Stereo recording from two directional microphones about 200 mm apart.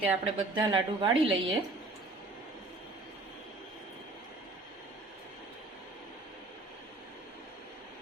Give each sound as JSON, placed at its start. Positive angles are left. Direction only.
{"t": 0.0, "sound": "a woman's voice", "side_deg": -25}